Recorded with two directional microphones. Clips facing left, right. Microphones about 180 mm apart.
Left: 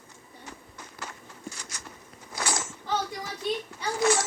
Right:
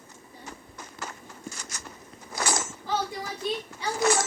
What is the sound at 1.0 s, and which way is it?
Walk, 45° right (ahead or behind).